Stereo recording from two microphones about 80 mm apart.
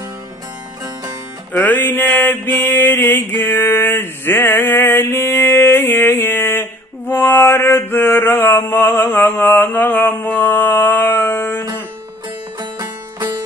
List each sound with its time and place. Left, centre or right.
1.5 s mantra: left
12.5 s music: right